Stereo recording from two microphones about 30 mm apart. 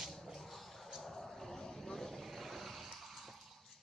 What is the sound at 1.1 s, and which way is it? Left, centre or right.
Vehicle, centre.